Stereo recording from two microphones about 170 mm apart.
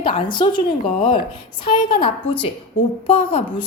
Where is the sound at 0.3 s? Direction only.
30° left (ahead or behind).